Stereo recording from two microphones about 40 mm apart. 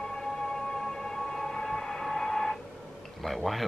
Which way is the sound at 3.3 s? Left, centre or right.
Centre.